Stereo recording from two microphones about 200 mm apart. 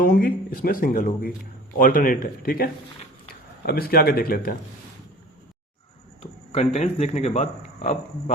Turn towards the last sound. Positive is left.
turn(degrees=35)  # may be behind; listen again after turning